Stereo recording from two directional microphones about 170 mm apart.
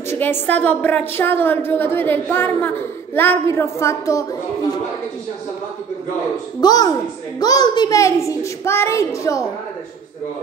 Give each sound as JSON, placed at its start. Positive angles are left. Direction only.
{"t": 0.1, "sound": "a woman's voice", "side_deg": 10}
{"t": 6.6, "sound": "a child's voice", "side_deg": 25}